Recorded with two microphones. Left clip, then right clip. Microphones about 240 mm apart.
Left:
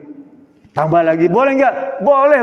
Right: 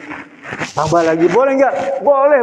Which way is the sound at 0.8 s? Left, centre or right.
Left.